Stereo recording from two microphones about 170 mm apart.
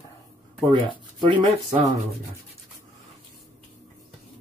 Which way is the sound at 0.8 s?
30° right (ahead or behind).